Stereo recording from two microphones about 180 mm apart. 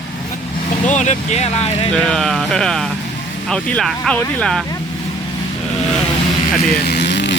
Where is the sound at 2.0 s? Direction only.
5° left (ahead or behind).